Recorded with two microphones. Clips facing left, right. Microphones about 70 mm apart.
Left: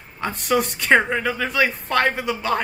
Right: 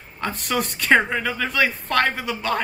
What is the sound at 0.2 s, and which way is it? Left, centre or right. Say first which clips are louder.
Speech: left 3 dB; centre.